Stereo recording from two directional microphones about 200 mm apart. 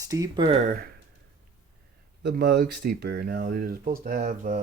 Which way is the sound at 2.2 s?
55° right (ahead or behind).